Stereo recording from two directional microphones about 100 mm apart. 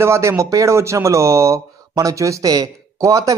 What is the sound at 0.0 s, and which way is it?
Speech, 30° right (ahead or behind).